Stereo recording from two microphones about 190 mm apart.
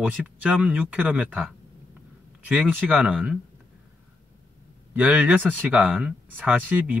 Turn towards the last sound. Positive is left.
turn(degrees=-10)  # may be behind; listen again after turning